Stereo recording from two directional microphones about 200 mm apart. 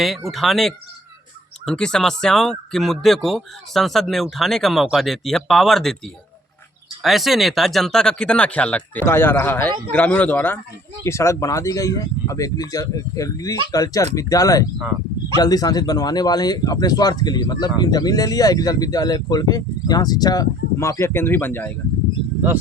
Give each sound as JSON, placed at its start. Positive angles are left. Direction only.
{"t": 0.3, "sound": "speech", "side_deg": 0}
{"t": 7.0, "sound": "speech", "side_deg": 0}